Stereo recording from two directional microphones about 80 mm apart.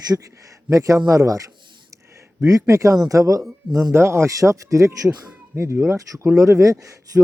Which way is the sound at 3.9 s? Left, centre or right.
Right.